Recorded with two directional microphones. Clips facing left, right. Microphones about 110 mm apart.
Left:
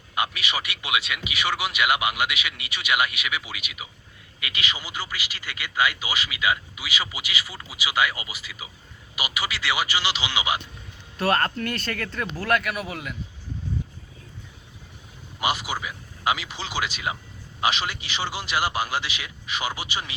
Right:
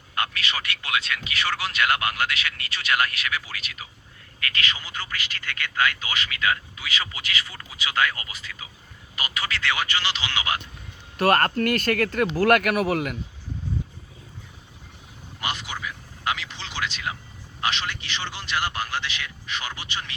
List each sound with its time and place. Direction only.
0.1 s a man's voice: 10° left (ahead or behind)
11.3 s speech: 55° right (ahead or behind)
15.4 s a man's voice: 5° left (ahead or behind)